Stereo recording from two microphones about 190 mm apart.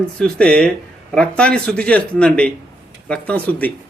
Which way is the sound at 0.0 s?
5° left (ahead or behind).